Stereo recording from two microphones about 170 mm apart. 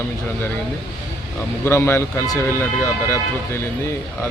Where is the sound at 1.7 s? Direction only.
15° left (ahead or behind).